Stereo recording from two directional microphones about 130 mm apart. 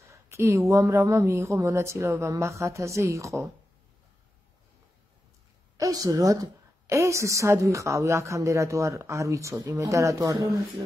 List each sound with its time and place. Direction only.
0.1 s a woman's voice: 20° right (ahead or behind)
5.8 s a woman's voice: 25° right (ahead or behind)